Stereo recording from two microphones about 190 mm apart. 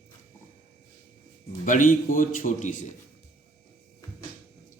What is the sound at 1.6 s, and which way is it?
A man's voice, 45° left (ahead or behind).